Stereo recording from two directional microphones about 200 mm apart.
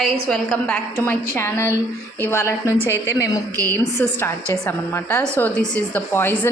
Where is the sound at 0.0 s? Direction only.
Centre (ahead or behind).